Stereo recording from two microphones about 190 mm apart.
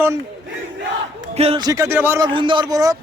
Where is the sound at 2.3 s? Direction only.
25° right (ahead or behind).